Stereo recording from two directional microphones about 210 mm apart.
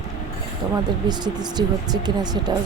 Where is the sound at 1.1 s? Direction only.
20° right (ahead or behind).